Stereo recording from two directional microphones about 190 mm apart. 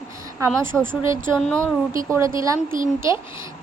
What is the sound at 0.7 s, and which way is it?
Speech, 5° left (ahead or behind).